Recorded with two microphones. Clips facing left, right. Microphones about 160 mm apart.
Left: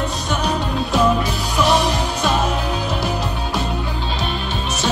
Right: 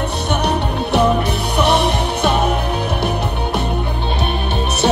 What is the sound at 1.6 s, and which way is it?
Music, 60° right (ahead or behind).